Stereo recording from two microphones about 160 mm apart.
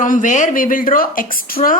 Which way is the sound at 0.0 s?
55° left (ahead or behind).